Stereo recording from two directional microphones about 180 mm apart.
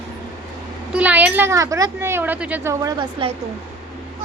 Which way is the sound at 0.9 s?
10° right (ahead or behind).